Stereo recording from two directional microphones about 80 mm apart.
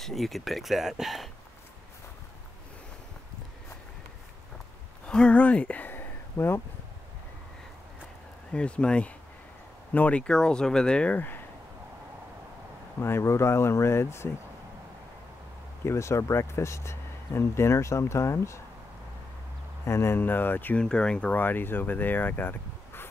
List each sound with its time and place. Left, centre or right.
0.0 s speech: centre
5.0 s speech: centre; by 6.6 s left
8.5 s speech: centre
13.0 s speech: left
15.8 s speech: left
19.8 s speech: left
20.8 s speech: centre